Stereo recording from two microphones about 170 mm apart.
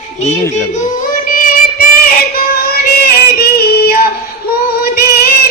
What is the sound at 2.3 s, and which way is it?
Music, 60° left (ahead or behind).